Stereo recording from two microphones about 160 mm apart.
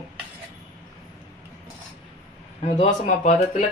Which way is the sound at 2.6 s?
45° left (ahead or behind).